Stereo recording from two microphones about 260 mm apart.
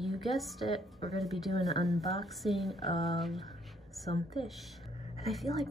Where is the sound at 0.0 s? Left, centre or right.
Centre.